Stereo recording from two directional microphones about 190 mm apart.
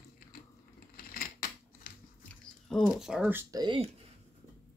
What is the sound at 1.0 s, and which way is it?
Scissors, 50° left (ahead or behind).